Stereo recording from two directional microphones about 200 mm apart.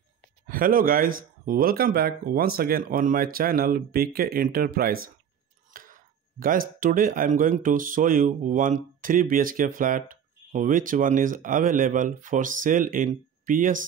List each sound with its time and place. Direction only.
0.5 s speech: 45° right (ahead or behind)